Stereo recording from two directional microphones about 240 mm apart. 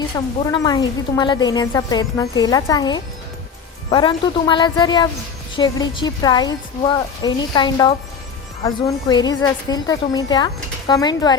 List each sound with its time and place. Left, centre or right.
0.4 s a woman's voice: centre